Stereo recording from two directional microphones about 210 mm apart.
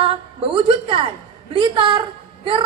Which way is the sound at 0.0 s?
25° right (ahead or behind).